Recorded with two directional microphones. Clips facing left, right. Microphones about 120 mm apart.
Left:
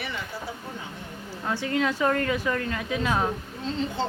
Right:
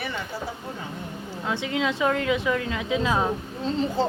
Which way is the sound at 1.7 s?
20° right (ahead or behind).